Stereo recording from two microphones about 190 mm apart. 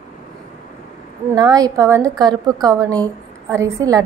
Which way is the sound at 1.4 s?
20° right (ahead or behind).